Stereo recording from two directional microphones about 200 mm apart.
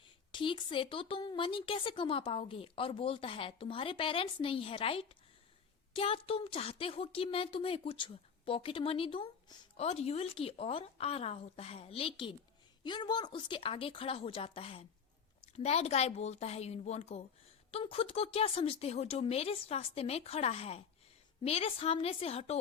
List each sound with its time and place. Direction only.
0.3 s a woman's voice: 25° left (ahead or behind)